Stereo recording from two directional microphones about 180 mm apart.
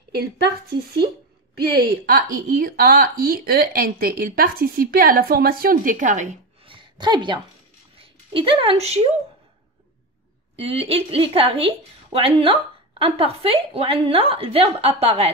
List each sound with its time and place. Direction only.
0.7 s speech: 25° right (ahead or behind)
1.6 s a woman's voice: 60° right (ahead or behind); by 6.7 s 40° right (ahead or behind)
6.7 s a sound: 25° right (ahead or behind)
8.0 s speech: 30° right (ahead or behind)
10.5 s a woman's voice: 30° right (ahead or behind)